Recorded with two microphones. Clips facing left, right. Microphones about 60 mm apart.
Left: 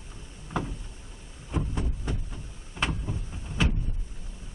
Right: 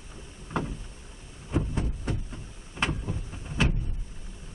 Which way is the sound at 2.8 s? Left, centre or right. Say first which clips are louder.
Right 1 dB; centre.